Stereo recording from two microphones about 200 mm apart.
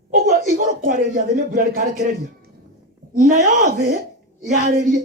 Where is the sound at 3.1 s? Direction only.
40° right (ahead or behind).